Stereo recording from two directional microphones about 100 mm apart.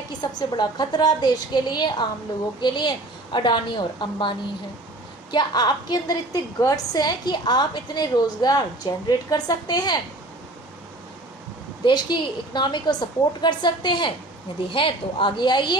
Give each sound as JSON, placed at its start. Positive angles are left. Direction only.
{"t": 0.2, "sound": "a woman's voice", "side_deg": 45}
{"t": 11.8, "sound": "a woman's voice", "side_deg": 50}